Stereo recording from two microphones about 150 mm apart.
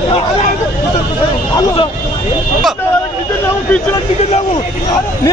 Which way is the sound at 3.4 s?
15° left (ahead or behind).